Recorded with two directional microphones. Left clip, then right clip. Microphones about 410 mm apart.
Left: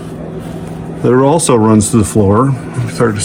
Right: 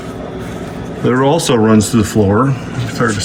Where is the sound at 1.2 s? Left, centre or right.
Centre.